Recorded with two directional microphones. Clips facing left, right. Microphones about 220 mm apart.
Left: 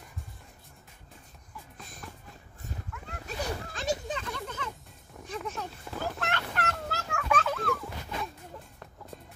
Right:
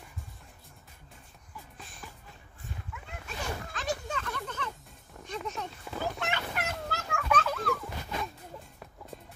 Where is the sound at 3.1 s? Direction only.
35° left (ahead or behind).